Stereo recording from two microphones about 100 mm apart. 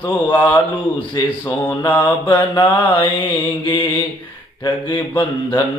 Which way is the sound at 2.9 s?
55° left (ahead or behind).